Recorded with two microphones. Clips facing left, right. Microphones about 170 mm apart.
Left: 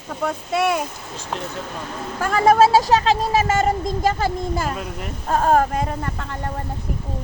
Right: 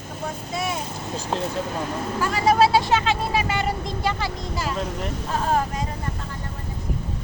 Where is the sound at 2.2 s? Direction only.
50° left (ahead or behind).